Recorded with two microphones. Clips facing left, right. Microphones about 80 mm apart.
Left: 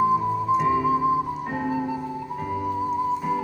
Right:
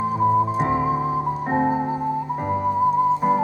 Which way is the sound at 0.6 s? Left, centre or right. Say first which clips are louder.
Even; right.